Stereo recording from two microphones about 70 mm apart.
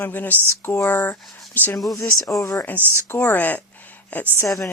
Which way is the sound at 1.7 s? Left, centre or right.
Left.